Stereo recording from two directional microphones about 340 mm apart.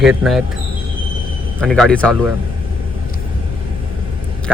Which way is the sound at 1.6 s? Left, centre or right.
Centre.